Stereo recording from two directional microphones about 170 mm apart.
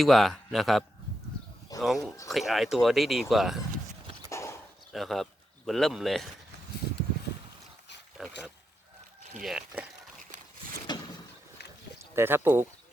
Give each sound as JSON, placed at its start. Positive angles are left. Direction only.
{"t": 0.0, "sound": "speech", "side_deg": 0}
{"t": 4.3, "sound": "dog", "side_deg": 15}
{"t": 4.9, "sound": "speech", "side_deg": 0}
{"t": 8.2, "sound": "a sound", "side_deg": 0}
{"t": 9.4, "sound": "speech", "side_deg": -5}
{"t": 10.9, "sound": "vehicle", "side_deg": 25}
{"t": 11.9, "sound": "speech", "side_deg": -15}